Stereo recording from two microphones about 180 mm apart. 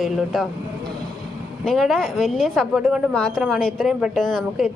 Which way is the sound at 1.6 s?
Centre (ahead or behind).